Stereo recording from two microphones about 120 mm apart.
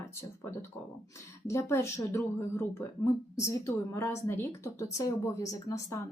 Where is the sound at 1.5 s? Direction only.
25° left (ahead or behind).